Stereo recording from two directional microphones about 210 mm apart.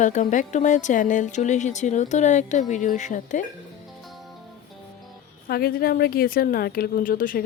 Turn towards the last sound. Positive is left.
turn(degrees=40)  # may be behind; listen again after turning